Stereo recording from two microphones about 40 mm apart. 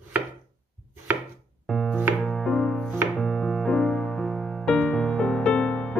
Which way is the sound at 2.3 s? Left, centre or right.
Centre.